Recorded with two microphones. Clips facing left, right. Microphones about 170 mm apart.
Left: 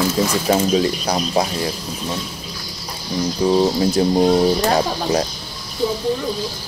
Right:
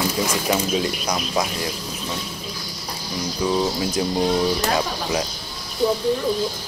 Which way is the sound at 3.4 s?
30° left (ahead or behind).